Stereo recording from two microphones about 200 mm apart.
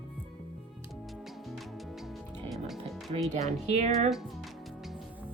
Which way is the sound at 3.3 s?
35° right (ahead or behind).